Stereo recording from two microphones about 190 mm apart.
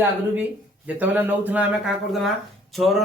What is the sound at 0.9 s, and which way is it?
Speech, 10° right (ahead or behind).